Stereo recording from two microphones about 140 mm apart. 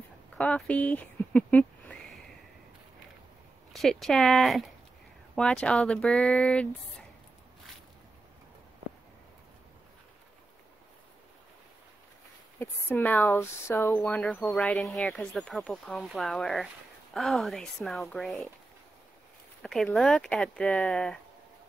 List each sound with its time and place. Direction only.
0.4 s a sound: 10° left (ahead or behind)
3.7 s speech: centre (ahead or behind)
12.6 s speech: 15° left (ahead or behind)
14.2 s speech: centre (ahead or behind)
19.6 s speech: 5° left (ahead or behind)